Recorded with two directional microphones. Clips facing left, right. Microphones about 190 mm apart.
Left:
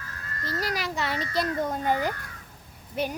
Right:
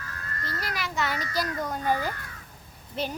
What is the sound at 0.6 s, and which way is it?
A child's voice, 35° left (ahead or behind).